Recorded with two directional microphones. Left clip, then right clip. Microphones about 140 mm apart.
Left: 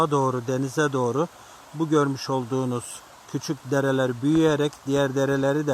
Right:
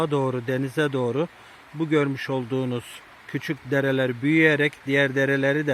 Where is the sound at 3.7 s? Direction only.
25° right (ahead or behind).